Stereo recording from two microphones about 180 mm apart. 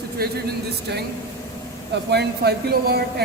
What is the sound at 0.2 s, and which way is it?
Speech, 55° right (ahead or behind).